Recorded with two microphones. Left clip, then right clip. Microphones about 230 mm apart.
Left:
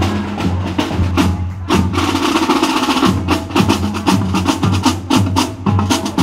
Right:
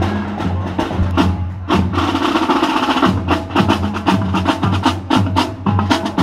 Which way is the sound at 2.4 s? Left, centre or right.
Centre.